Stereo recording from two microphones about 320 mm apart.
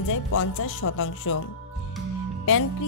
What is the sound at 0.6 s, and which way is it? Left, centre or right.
Speech, left.